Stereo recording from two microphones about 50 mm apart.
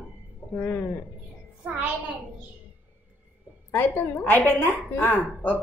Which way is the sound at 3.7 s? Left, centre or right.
Left.